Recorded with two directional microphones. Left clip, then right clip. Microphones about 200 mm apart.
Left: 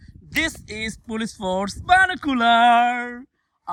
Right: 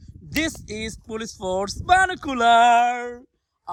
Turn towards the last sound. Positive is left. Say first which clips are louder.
# left 1 dB
turn(degrees=-30)  # may be behind; listen again after turning